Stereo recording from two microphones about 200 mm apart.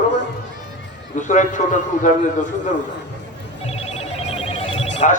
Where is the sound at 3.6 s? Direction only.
30° left (ahead or behind).